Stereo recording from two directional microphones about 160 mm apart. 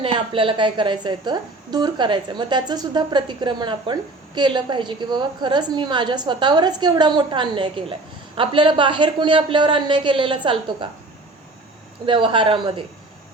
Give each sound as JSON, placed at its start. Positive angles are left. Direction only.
{"t": 0.0, "sound": "a woman's voice", "side_deg": -30}
{"t": 12.0, "sound": "a woman's voice", "side_deg": -30}